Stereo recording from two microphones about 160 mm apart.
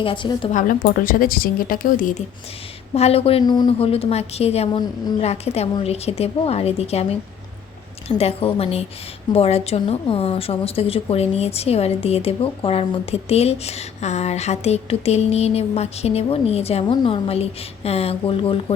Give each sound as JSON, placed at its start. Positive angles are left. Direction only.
{"t": 0.0, "sound": "a woman's voice", "side_deg": 30}
{"t": 0.5, "sound": "speech", "side_deg": 60}
{"t": 2.9, "sound": "a woman's voice", "side_deg": 40}